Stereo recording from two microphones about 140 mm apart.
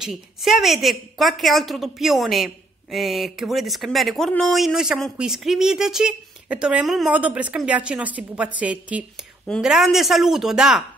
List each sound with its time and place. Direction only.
0.0 s speech: centre (ahead or behind)